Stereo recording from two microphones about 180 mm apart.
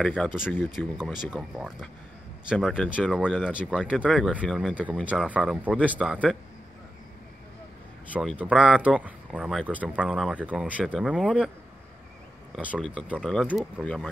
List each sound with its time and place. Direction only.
0.0 s speech: centre (ahead or behind)
8.1 s speech: 5° right (ahead or behind)
12.5 s speech: centre (ahead or behind)